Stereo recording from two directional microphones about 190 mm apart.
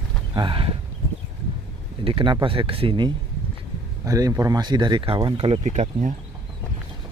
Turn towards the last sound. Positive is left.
turn(degrees=-40)  # may be behind; listen again after turning